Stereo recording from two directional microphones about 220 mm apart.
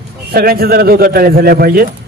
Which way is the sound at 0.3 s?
45° right (ahead or behind).